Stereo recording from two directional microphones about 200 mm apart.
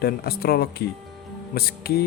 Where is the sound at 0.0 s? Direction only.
50° left (ahead or behind).